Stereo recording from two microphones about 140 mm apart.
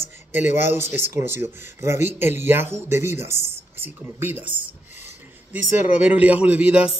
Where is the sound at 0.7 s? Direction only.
15° right (ahead or behind).